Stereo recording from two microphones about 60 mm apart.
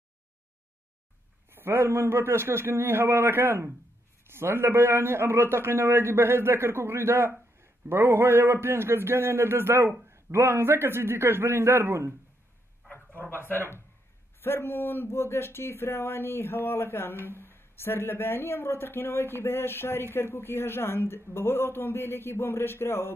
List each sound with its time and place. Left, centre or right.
1.5 s a man's voice: right
12.9 s a man's voice: left